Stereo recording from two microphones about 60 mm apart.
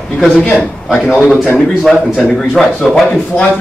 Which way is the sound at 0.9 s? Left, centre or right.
Centre.